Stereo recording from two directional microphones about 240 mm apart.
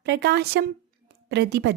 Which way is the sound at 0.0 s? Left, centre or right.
Right.